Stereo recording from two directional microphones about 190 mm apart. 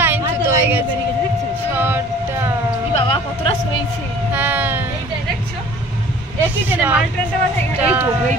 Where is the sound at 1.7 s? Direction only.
10° right (ahead or behind).